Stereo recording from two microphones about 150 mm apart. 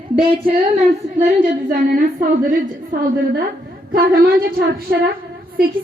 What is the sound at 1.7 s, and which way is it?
A woman's voice, 70° right (ahead or behind).